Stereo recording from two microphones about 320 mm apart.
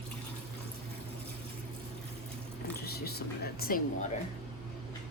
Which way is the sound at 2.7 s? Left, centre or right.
Left.